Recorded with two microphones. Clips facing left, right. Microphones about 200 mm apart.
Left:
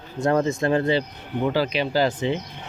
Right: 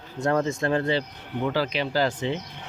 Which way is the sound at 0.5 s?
20° left (ahead or behind).